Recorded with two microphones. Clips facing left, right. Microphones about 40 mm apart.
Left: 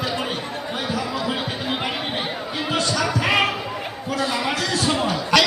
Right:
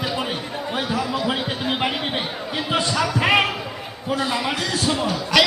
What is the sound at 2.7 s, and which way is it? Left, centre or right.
Basketball bounce, centre.